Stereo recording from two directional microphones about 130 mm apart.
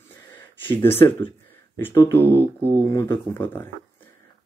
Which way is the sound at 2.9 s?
20° left (ahead or behind).